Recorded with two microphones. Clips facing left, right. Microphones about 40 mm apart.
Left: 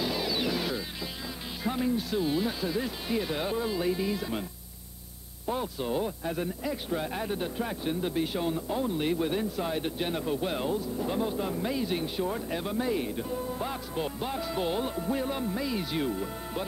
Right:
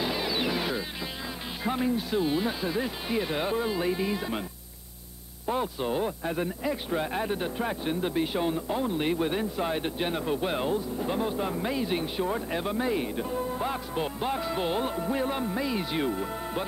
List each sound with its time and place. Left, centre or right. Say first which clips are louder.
0.0 s vehicle: right 1 dB; centre
1.6 s speech: right 1 dB; centre
5.5 s speech: right 2 dB; centre